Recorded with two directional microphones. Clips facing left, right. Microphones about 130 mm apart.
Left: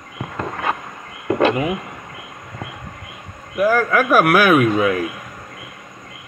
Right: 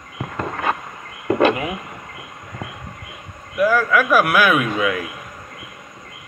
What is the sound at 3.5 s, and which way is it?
Speech, 40° left (ahead or behind).